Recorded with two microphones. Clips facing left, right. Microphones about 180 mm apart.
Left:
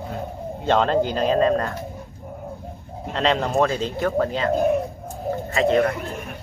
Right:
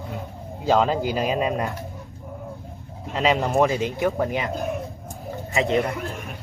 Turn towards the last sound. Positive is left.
turn(degrees=-20)  # may be behind; listen again after turning